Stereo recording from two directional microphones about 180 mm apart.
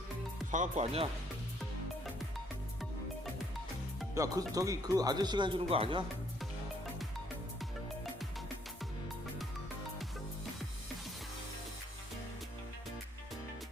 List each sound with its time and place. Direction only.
0.5 s speech: 40° right (ahead or behind)
4.1 s speech: 20° right (ahead or behind)